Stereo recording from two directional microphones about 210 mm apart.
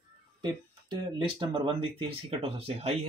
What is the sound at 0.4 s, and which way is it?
Speech, 20° right (ahead or behind).